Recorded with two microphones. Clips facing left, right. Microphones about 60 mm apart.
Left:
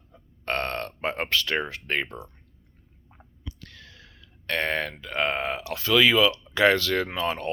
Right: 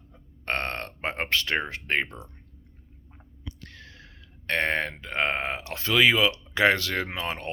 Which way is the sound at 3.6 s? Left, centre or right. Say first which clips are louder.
Right 1 dB; right.